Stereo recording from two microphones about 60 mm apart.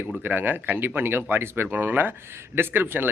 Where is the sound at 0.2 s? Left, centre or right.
Right.